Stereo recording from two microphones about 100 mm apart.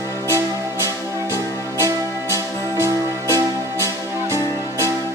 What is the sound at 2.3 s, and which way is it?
Music, 30° right (ahead or behind).